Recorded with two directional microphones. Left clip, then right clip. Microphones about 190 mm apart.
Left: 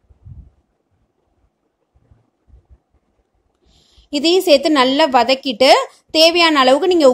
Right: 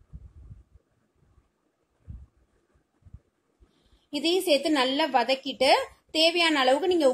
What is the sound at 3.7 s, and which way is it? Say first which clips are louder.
A woman's voice: left 12 dB; 45° left (ahead or behind).